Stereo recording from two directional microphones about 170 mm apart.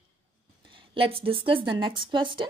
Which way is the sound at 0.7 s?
30° right (ahead or behind).